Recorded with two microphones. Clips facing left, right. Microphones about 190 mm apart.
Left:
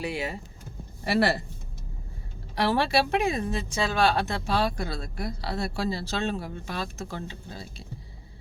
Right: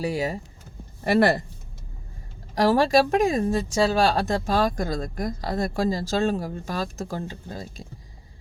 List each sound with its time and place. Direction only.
0.0 s speech: 40° right (ahead or behind)
1.0 s speech: 50° right (ahead or behind)
2.6 s speech: 40° right (ahead or behind)